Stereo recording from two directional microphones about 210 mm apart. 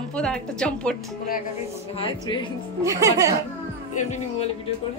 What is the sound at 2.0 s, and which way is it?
Speech, 25° left (ahead or behind).